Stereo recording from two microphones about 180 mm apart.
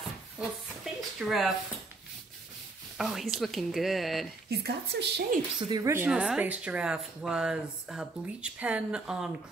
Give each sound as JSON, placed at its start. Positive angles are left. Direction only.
{"t": 1.2, "sound": "speech", "side_deg": 0}
{"t": 3.0, "sound": "speech", "side_deg": 0}
{"t": 4.5, "sound": "a woman's voice", "side_deg": -65}
{"t": 5.6, "sound": "speech", "side_deg": -25}